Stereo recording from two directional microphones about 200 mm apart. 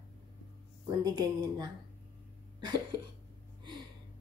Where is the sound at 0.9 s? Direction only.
20° right (ahead or behind).